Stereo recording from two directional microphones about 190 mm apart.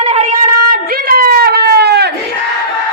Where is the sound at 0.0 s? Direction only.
35° right (ahead or behind).